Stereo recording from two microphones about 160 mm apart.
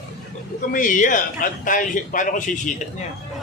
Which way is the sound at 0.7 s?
55° left (ahead or behind).